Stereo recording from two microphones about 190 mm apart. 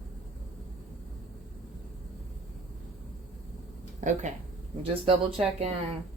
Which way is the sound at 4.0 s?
40° right (ahead or behind).